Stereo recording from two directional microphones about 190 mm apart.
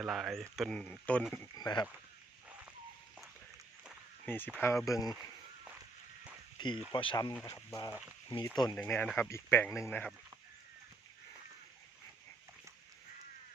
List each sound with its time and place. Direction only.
0.0 s speech: centre (ahead or behind)
1.5 s speech: 20° left (ahead or behind)
4.3 s speech: 10° left (ahead or behind)
6.6 s speech: 25° left (ahead or behind)
8.7 s speech: 10° left (ahead or behind)